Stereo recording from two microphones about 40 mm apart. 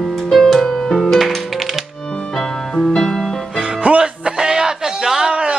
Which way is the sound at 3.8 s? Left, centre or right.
Right.